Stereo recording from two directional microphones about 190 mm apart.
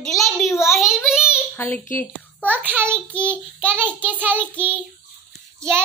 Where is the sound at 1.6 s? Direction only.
10° left (ahead or behind).